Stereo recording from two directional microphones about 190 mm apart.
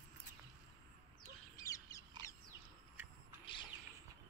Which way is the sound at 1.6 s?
15° left (ahead or behind).